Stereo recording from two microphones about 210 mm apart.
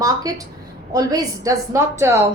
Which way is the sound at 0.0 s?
15° right (ahead or behind).